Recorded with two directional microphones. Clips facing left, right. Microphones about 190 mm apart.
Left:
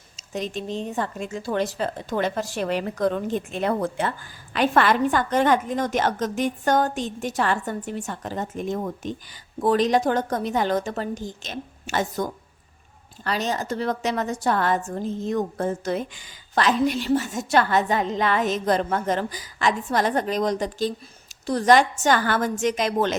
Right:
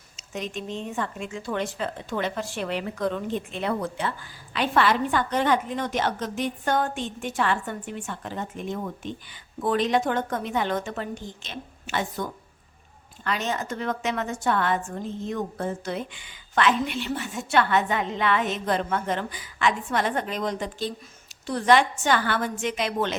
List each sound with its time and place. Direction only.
0.2 s speech: 35° left (ahead or behind)